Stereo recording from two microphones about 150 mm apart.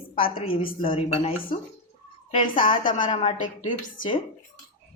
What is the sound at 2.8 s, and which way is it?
A woman's voice, 60° left (ahead or behind).